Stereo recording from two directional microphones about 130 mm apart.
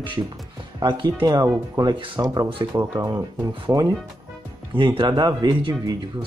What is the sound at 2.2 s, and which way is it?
Speech, 30° right (ahead or behind).